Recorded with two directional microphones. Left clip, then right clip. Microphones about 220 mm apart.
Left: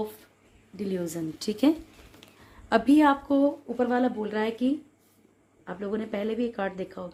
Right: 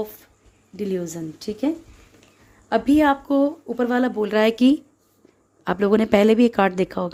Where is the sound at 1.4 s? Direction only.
5° right (ahead or behind).